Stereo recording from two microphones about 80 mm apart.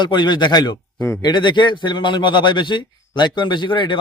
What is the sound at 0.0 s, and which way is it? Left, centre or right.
A man's voice, left.